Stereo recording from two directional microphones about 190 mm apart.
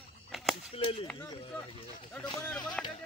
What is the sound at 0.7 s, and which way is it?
Cap gun, 30° left (ahead or behind).